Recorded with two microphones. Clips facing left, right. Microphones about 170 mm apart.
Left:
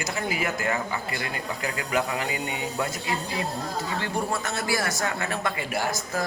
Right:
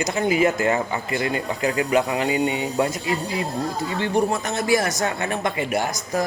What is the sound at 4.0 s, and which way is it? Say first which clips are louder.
Speech: right 9 dB; 20° right (ahead or behind).